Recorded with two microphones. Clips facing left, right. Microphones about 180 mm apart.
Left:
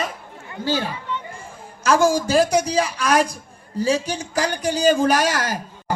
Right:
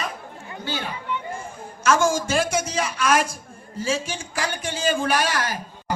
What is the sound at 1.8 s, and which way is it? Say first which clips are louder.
Speech: left 3 dB; 35° left (ahead or behind).